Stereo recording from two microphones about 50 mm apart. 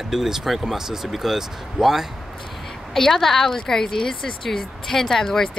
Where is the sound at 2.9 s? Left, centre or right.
Centre.